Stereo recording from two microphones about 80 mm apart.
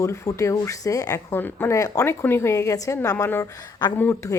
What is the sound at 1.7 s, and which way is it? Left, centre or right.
A woman's voice, left.